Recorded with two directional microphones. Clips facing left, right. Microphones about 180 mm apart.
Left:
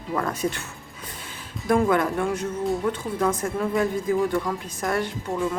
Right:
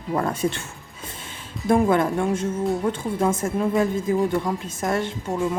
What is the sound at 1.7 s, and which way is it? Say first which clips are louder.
A woman's voice: right 2 dB; 25° right (ahead or behind).